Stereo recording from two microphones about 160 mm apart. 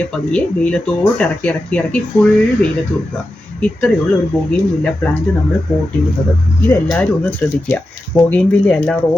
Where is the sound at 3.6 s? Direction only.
5° left (ahead or behind).